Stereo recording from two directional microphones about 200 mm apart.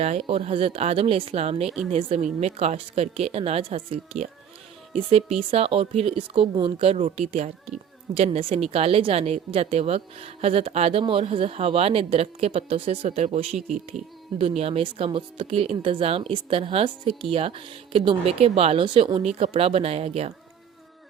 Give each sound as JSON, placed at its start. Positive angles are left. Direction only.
{"t": 0.0, "sound": "a woman's voice", "side_deg": -35}